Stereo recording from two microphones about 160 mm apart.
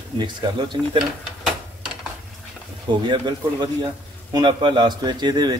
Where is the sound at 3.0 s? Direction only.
30° right (ahead or behind).